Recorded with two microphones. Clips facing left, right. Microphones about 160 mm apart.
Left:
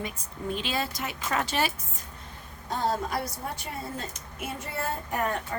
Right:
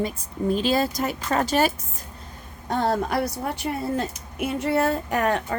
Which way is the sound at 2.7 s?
60° right (ahead or behind).